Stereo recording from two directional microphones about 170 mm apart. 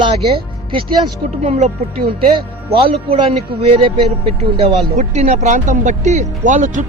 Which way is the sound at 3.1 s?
35° right (ahead or behind).